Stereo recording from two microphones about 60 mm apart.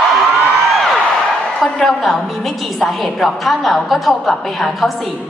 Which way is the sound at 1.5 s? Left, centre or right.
Centre.